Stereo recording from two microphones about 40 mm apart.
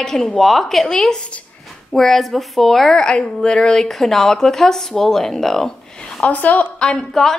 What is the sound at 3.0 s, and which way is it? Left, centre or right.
A woman's voice, left.